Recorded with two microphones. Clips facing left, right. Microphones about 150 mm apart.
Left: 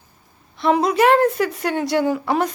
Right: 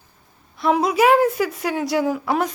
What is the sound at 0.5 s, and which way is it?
A woman's voice, centre (ahead or behind).